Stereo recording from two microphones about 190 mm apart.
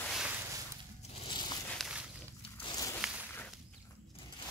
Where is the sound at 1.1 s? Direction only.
25° left (ahead or behind).